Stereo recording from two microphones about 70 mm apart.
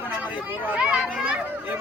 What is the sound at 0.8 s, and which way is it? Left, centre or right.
Speech, centre.